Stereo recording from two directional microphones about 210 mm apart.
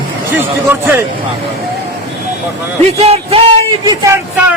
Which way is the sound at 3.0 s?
30° right (ahead or behind).